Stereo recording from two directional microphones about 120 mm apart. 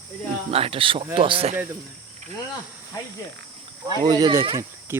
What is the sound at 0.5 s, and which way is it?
Speech, 50° right (ahead or behind).